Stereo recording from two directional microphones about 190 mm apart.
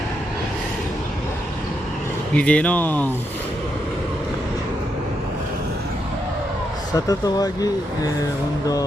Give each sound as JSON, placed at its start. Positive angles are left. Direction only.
{"t": 2.3, "sound": "speech", "side_deg": 5}
{"t": 6.9, "sound": "speech", "side_deg": 20}